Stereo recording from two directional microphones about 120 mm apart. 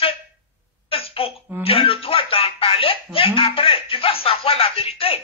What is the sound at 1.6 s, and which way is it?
Speech, 50° left (ahead or behind).